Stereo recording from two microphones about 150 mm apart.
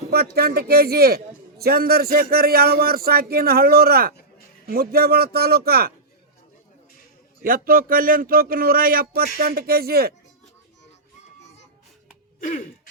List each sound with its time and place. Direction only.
0.1 s a man's voice: 90° right
7.4 s speech: 75° right (ahead or behind); by 10.2 s 90° right
12.4 s music: 60° left (ahead or behind)